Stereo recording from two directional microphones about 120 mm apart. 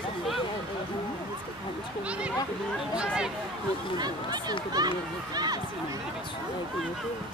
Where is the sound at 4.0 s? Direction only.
35° right (ahead or behind).